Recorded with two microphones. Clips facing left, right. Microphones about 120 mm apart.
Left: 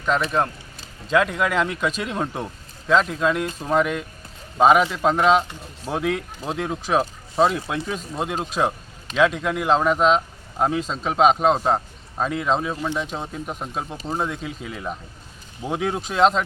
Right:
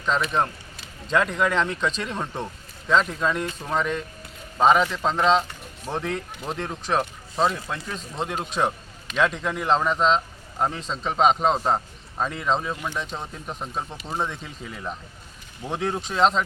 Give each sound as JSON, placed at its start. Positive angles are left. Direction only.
{"t": 1.0, "sound": "speech", "side_deg": 5}
{"t": 12.7, "sound": "speech", "side_deg": 25}
{"t": 13.0, "sound": "speech", "side_deg": 10}